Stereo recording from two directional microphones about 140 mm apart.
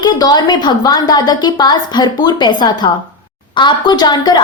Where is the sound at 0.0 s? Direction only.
30° left (ahead or behind).